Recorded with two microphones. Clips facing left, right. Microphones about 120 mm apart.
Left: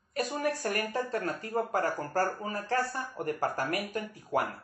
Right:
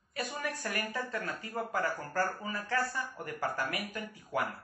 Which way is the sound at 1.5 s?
40° left (ahead or behind).